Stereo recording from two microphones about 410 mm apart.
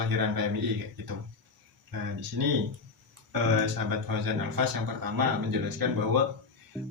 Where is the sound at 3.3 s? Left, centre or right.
Right.